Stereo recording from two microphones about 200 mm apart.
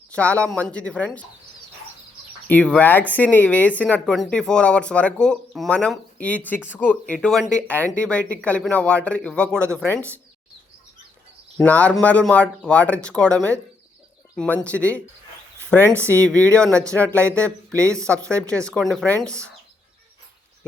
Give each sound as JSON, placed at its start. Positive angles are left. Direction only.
{"t": 0.1, "sound": "speech", "side_deg": 5}
{"t": 2.5, "sound": "speech", "side_deg": 5}
{"t": 11.5, "sound": "speech", "side_deg": 5}
{"t": 15.9, "sound": "speech", "side_deg": -15}
{"t": 16.2, "sound": "speech", "side_deg": 5}
{"t": 18.1, "sound": "speech", "side_deg": -15}
{"t": 18.7, "sound": "speech", "side_deg": 0}